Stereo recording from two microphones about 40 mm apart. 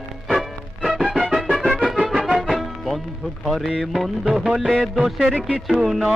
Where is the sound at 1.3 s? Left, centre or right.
Centre.